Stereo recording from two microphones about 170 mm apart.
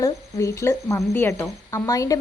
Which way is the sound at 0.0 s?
15° left (ahead or behind).